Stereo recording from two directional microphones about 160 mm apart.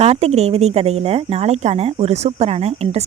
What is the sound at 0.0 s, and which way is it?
Speech, 40° right (ahead or behind).